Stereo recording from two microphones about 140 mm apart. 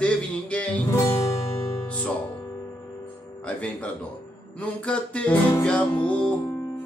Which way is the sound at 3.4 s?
10° left (ahead or behind).